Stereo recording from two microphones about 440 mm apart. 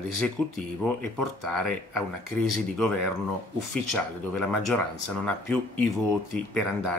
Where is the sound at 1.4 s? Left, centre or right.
Right.